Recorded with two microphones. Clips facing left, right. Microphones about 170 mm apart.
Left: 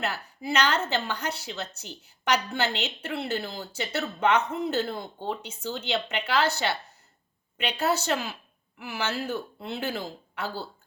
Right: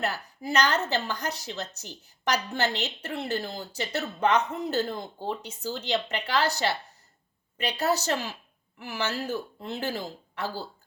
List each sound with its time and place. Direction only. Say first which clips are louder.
0.0 s a woman's voice: right 1 dB; 40° right (ahead or behind)